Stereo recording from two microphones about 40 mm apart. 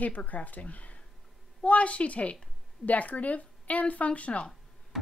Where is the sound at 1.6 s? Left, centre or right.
Left.